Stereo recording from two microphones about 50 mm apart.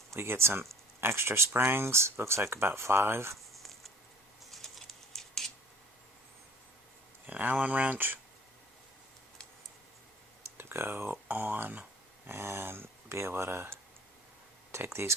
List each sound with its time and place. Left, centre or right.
0.1 s speech: right
4.5 s typing: centre
7.3 s speech: right
10.6 s speech: right
12.3 s speech: right